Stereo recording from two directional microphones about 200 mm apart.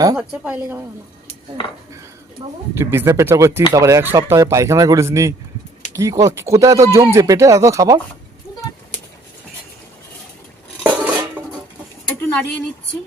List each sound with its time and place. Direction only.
0.2 s speech: 5° right (ahead or behind)
2.7 s speech: 10° right (ahead or behind)
10.8 s dishes: 10° right (ahead or behind)